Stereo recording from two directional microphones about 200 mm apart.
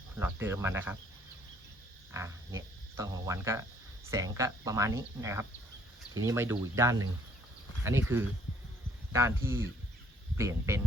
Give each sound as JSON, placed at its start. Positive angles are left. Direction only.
{"t": 0.2, "sound": "speech", "side_deg": -10}
{"t": 2.1, "sound": "speech", "side_deg": -15}